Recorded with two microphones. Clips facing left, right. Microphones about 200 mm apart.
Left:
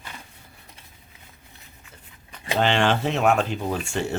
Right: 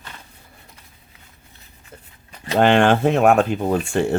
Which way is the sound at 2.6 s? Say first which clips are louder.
Right 7 dB; 50° right (ahead or behind).